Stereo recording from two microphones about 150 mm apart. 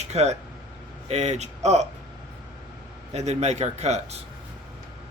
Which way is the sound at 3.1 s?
50° right (ahead or behind).